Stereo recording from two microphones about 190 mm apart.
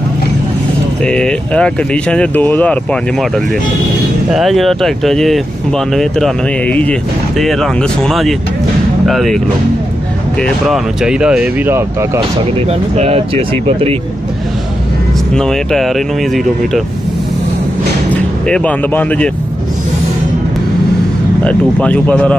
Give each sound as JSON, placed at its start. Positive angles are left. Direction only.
{"t": 1.0, "sound": "speech", "side_deg": 5}
{"t": 10.4, "sound": "speech", "side_deg": 0}
{"t": 12.2, "sound": "speech", "side_deg": -30}
{"t": 15.3, "sound": "speech", "side_deg": 0}
{"t": 18.1, "sound": "speech", "side_deg": 5}
{"t": 21.5, "sound": "speech", "side_deg": 5}